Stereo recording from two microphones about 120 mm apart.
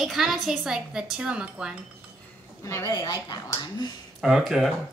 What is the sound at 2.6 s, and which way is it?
Speech, 30° left (ahead or behind).